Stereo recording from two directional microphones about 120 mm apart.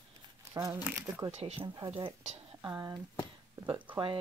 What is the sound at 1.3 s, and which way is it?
Speech, 55° right (ahead or behind).